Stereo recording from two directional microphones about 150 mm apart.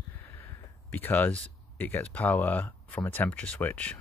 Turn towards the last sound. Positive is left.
turn(degrees=10)  # may be behind; listen again after turning